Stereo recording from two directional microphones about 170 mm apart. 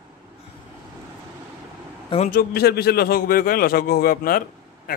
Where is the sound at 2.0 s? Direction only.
40° left (ahead or behind).